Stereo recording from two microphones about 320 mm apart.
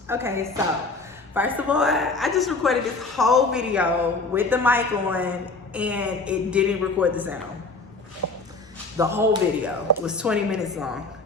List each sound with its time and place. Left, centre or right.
0.1 s a woman's voice: centre
8.2 s shuffle: right
9.0 s speech: centre